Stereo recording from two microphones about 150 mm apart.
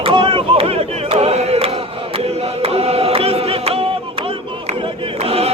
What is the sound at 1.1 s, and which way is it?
Choir, 45° right (ahead or behind).